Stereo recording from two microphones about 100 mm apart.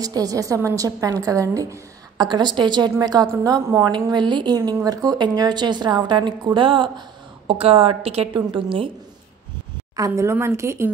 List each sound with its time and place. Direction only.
0.0 s a woman's voice: 40° right (ahead or behind)
3.9 s a woman's voice: 50° right (ahead or behind)
7.4 s a woman's voice: 75° right (ahead or behind)
8.3 s a woman's voice: 50° right (ahead or behind)
9.9 s speech: 30° right (ahead or behind)